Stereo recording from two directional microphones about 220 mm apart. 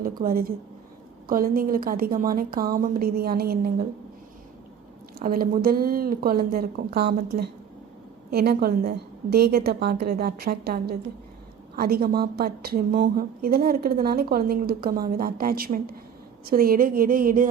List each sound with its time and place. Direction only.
0.0 s a woman's voice: 40° right (ahead or behind)
5.2 s a woman's voice: 40° right (ahead or behind)